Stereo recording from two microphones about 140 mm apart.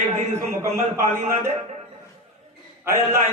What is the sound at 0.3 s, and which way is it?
A man's voice, 20° right (ahead or behind).